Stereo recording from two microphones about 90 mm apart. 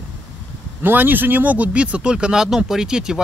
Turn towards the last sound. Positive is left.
turn(degrees=-10)  # may be behind; listen again after turning